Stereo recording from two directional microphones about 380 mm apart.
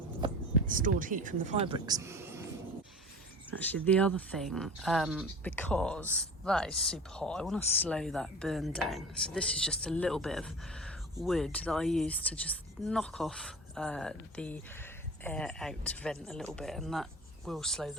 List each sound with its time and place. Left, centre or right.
0.2 s a sound: centre
0.7 s speech: right
3.6 s speech: centre